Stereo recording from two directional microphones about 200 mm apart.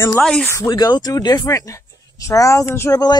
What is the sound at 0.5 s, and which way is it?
Speech, 20° left (ahead or behind).